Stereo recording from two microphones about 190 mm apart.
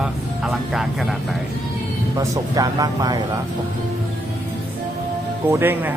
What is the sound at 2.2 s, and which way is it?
Speech, 20° right (ahead or behind).